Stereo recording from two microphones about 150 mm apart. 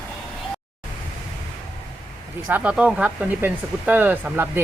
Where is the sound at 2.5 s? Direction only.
10° right (ahead or behind).